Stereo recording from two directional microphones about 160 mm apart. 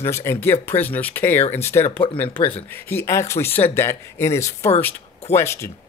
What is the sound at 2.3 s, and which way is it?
Speech, 35° left (ahead or behind).